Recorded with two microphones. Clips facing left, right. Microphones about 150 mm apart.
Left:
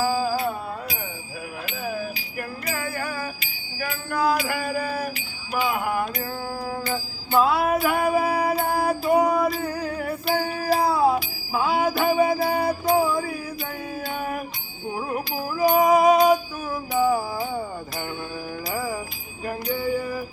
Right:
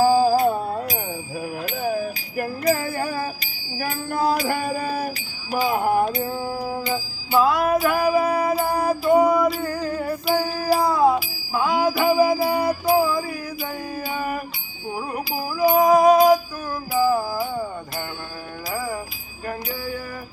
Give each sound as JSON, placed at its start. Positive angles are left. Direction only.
{"t": 0.0, "sound": "music", "side_deg": -40}
{"t": 6.7, "sound": "music", "side_deg": -10}
{"t": 14.9, "sound": "music", "side_deg": -5}
{"t": 18.7, "sound": "bell", "side_deg": 0}
{"t": 19.5, "sound": "music", "side_deg": -5}